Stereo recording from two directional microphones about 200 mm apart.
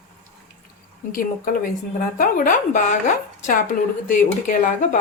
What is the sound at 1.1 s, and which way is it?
Speech, 45° left (ahead or behind).